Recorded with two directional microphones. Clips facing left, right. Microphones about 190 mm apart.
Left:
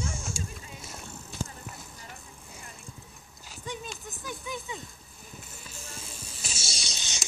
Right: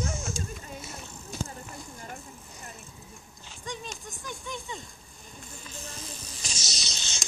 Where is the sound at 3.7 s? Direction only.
5° left (ahead or behind).